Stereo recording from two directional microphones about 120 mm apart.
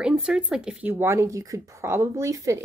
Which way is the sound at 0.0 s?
5° right (ahead or behind).